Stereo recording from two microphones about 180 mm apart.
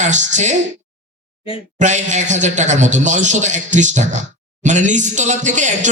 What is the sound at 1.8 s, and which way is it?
A man's voice, 40° right (ahead or behind).